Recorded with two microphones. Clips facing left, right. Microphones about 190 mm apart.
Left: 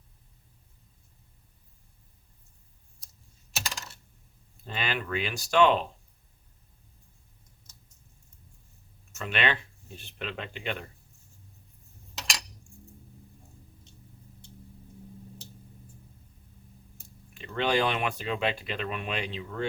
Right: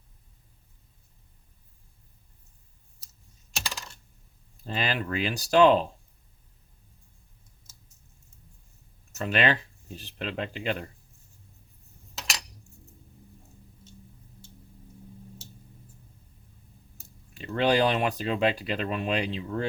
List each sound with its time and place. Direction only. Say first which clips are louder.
3.5 s coin: even; 5° left (ahead or behind)
4.6 s speech: right 3 dB; 35° right (ahead or behind)
9.1 s speech: right 4 dB; 40° right (ahead or behind)
17.3 s speech: right 3 dB; 40° right (ahead or behind)